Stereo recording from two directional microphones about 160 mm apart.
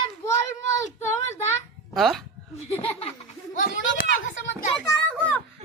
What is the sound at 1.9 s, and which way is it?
Speech, centre (ahead or behind).